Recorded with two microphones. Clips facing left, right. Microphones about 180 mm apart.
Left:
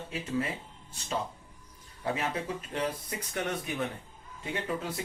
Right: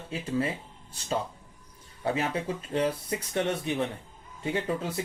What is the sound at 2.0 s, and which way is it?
Speech, 30° right (ahead or behind).